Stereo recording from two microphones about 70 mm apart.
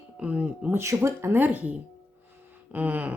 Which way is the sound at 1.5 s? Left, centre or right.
Right.